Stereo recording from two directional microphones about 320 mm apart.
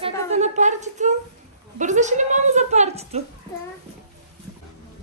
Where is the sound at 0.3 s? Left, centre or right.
Right.